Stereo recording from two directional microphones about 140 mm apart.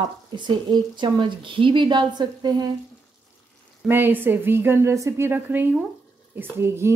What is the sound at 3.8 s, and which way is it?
A woman's voice, 15° right (ahead or behind).